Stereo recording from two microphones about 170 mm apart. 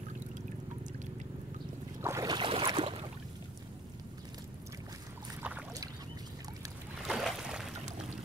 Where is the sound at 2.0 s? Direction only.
15° right (ahead or behind).